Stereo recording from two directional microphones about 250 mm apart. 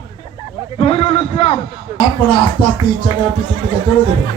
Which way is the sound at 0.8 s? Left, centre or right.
Left.